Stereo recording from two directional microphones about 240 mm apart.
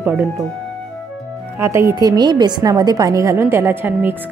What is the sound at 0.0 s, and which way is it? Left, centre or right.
Speech, centre.